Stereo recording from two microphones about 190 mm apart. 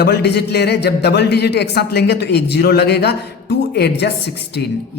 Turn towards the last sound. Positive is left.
turn(degrees=60)  # may be behind; listen again after turning